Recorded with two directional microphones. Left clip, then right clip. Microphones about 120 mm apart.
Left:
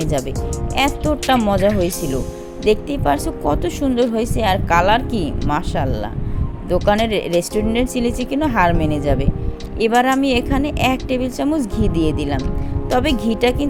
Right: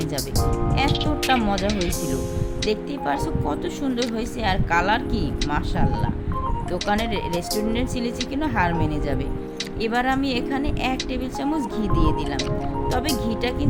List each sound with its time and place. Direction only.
0.8 s speech: 55° left (ahead or behind)
1.5 s speech: centre (ahead or behind)
2.6 s speech: 50° left (ahead or behind)